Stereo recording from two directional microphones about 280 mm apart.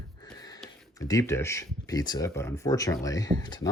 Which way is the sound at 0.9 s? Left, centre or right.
Centre.